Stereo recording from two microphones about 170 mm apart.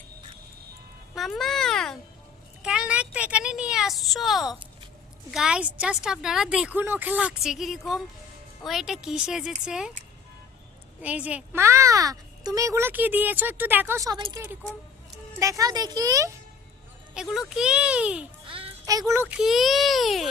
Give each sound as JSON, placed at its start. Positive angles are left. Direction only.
{"t": 1.1, "sound": "a sound", "side_deg": 0}
{"t": 5.3, "sound": "speech", "side_deg": -5}
{"t": 11.0, "sound": "speech", "side_deg": -10}
{"t": 17.2, "sound": "speech", "side_deg": 0}
{"t": 18.4, "sound": "a sound", "side_deg": -30}
{"t": 18.9, "sound": "speech", "side_deg": -20}
{"t": 19.4, "sound": "speech", "side_deg": 0}